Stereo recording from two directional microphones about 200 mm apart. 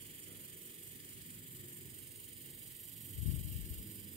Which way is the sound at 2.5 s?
Centre (ahead or behind).